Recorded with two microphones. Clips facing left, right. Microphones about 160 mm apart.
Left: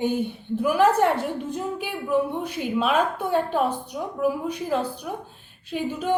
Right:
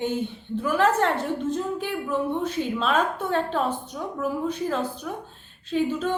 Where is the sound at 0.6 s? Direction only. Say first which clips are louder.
Left 3 dB; 10° left (ahead or behind).